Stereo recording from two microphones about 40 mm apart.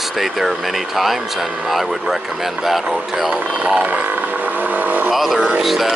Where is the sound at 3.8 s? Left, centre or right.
Right.